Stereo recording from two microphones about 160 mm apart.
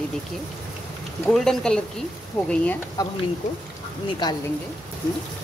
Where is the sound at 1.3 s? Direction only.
5° left (ahead or behind).